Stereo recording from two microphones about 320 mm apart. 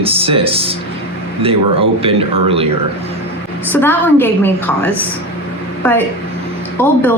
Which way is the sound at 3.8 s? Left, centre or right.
Centre.